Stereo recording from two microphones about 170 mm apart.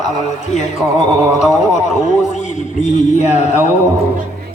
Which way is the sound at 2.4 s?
45° left (ahead or behind).